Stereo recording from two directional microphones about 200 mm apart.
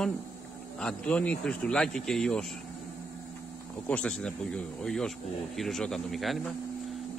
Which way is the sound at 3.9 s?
5° left (ahead or behind).